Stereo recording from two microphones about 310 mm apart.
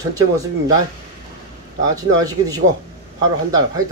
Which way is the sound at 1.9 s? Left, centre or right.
Centre.